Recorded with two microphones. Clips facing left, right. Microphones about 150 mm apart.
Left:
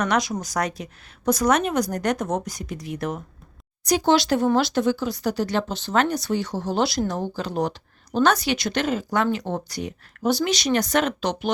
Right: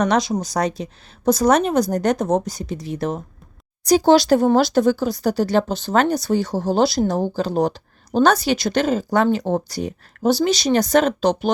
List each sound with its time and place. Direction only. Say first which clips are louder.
0.0 s a woman's voice: right 4 dB; 30° right (ahead or behind)